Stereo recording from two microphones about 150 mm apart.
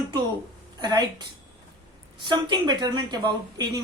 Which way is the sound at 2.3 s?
30° right (ahead or behind).